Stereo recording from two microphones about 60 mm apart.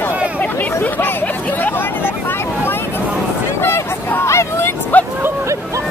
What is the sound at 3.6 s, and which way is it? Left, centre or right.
Vehicle, left.